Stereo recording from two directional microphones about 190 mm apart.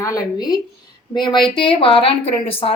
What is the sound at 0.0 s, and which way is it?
A woman's voice, 20° left (ahead or behind).